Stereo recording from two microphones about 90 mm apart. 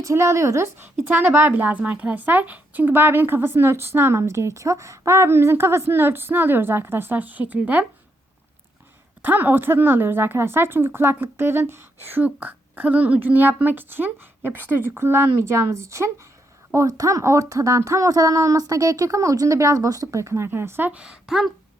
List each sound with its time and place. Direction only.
0.0 s a woman's voice: 30° right (ahead or behind)
9.2 s a woman's voice: 20° right (ahead or behind)
20.9 s a woman's voice: 10° right (ahead or behind)